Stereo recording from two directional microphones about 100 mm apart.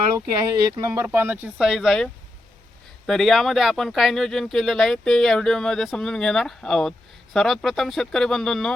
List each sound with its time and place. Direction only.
0.3 s speech: 45° right (ahead or behind)
0.9 s speech: 25° right (ahead or behind)
1.5 s speech: 5° right (ahead or behind)
3.1 s speech: 5° left (ahead or behind)